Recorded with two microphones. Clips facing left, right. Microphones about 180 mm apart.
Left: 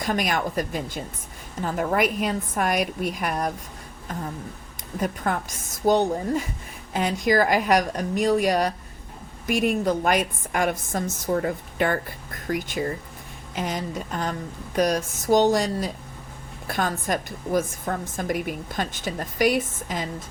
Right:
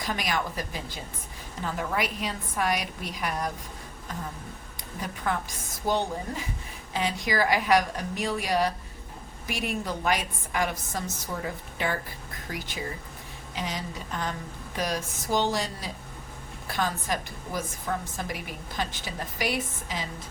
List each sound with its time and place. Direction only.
0.0 s a woman's voice: 50° left (ahead or behind)
4.9 s a woman's voice: 50° left (ahead or behind)